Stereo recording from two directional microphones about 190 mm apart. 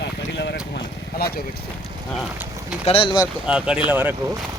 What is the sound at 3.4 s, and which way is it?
Speech, 5° right (ahead or behind).